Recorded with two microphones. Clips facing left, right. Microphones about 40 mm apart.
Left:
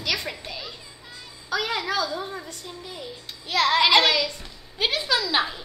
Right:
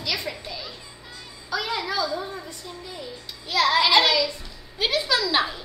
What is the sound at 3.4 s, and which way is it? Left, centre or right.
A woman's voice, left.